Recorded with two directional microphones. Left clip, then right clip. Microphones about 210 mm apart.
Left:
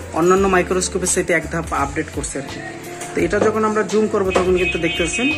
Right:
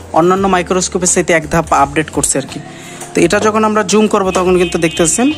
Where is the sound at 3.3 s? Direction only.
55° right (ahead or behind).